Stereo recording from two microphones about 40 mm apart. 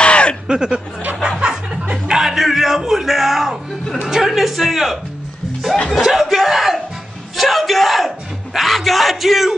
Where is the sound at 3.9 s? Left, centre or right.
Centre.